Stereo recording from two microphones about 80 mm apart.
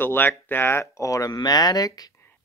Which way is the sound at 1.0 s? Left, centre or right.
Left.